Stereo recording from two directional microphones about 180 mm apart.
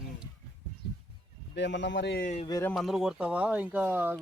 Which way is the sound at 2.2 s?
45° left (ahead or behind).